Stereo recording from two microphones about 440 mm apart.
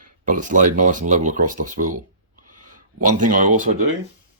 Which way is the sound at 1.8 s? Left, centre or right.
Right.